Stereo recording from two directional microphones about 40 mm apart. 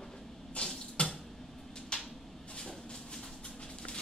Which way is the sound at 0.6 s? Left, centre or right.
Left.